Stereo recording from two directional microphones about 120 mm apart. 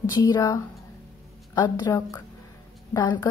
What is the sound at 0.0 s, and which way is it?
A woman's voice, 30° left (ahead or behind).